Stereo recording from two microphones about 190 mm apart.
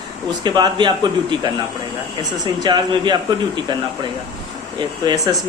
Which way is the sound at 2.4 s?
20° right (ahead or behind).